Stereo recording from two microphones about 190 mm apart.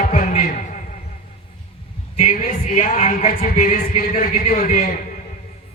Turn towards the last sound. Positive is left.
turn(degrees=50)  # may be behind; listen again after turning